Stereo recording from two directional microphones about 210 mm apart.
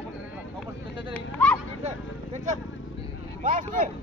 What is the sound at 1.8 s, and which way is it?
Speech, 35° right (ahead or behind).